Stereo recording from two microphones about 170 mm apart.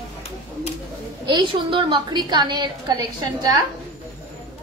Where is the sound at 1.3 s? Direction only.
25° right (ahead or behind).